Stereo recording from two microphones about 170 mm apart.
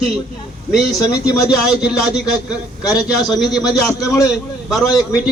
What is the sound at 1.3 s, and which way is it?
Speech, 20° left (ahead or behind).